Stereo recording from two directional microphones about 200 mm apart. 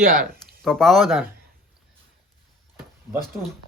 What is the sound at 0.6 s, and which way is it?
Speech, centre (ahead or behind).